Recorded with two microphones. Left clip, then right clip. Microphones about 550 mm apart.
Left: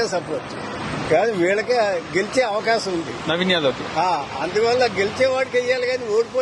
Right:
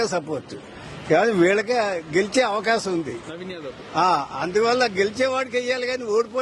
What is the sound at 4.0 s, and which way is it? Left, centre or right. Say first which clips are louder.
Speech: right 3 dB; right.